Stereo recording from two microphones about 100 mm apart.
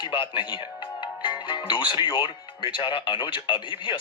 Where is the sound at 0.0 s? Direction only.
55° left (ahead or behind).